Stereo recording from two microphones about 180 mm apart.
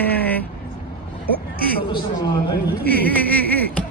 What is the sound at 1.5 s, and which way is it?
Speech, 55° left (ahead or behind).